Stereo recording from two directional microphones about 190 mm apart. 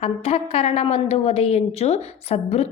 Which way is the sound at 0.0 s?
30° left (ahead or behind).